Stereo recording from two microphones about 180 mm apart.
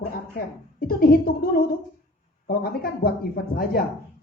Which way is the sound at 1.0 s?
55° left (ahead or behind).